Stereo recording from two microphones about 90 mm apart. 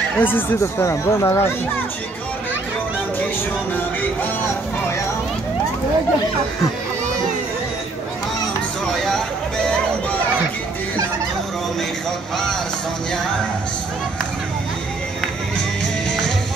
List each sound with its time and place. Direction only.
0.2 s speech: 25° left (ahead or behind)